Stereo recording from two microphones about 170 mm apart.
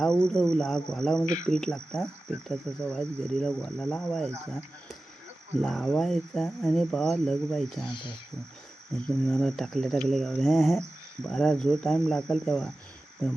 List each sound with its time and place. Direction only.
0.0 s speech: 5° left (ahead or behind)
1.2 s cricket: 50° left (ahead or behind)
1.5 s speech: 5° left (ahead or behind)
5.6 s speech: centre (ahead or behind)
9.2 s speech: 5° left (ahead or behind)